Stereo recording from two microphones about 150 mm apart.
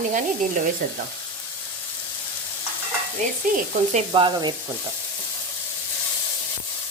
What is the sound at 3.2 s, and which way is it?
Sizzle, 55° right (ahead or behind).